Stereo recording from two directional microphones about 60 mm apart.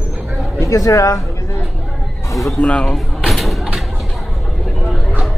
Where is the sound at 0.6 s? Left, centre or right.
Left.